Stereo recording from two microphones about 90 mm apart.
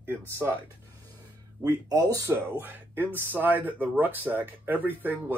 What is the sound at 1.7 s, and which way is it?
Speech, 45° right (ahead or behind).